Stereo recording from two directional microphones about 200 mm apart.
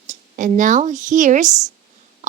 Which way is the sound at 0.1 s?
40° right (ahead or behind).